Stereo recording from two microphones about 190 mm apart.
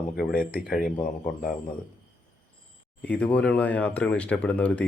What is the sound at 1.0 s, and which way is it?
Speech, 45° left (ahead or behind).